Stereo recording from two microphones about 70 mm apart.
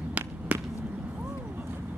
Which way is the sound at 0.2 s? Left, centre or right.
Centre.